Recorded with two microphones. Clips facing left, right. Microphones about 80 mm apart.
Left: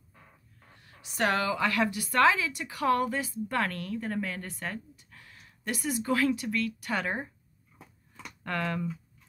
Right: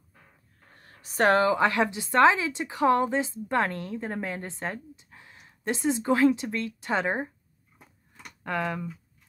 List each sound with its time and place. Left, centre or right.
0.7 s a woman's voice: right
8.5 s speech: centre